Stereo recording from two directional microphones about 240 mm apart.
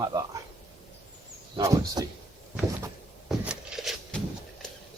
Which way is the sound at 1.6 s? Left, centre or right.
Centre.